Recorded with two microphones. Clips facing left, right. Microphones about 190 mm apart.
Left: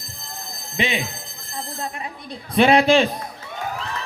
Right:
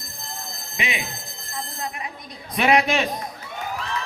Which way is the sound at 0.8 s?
30° left (ahead or behind).